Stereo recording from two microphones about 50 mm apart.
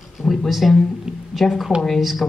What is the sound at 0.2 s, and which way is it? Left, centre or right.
A woman's voice, centre.